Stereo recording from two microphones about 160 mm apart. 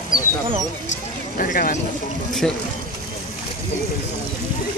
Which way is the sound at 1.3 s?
60° left (ahead or behind).